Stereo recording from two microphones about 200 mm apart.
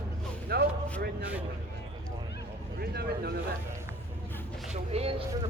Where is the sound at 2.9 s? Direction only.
50° right (ahead or behind).